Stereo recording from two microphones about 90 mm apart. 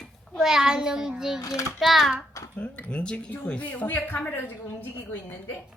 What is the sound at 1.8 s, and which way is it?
Speech, centre (ahead or behind).